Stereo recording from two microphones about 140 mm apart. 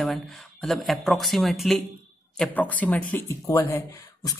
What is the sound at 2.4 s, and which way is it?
Speech, 10° left (ahead or behind).